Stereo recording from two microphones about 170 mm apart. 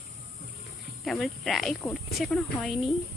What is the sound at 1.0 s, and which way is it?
Speech, centre (ahead or behind).